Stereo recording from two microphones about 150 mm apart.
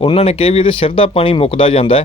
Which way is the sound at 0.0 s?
40° left (ahead or behind).